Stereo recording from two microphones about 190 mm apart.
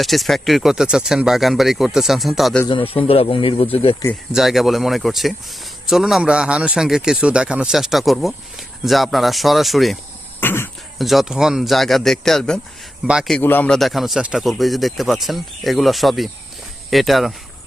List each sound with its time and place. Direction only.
0.0 s speech: centre (ahead or behind)
2.6 s speech: 30° left (ahead or behind)
4.0 s speech: 15° left (ahead or behind)
4.4 s speech: centre (ahead or behind)
10.4 s speech: 10° left (ahead or behind)
10.9 s speech: centre (ahead or behind)